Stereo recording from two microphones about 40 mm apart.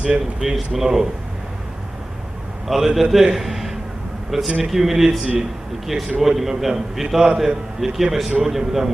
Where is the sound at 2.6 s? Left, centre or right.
Centre.